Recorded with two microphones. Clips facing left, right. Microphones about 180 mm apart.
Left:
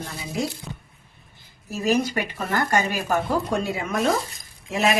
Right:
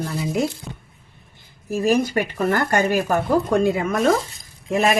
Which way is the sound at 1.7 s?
50° right (ahead or behind).